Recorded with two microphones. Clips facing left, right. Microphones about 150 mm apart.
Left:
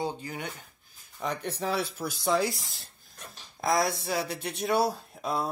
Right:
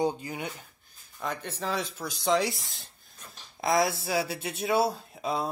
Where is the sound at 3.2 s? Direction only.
80° left.